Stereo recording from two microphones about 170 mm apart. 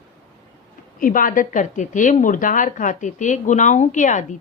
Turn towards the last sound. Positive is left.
turn(degrees=45)  # may be behind; listen again after turning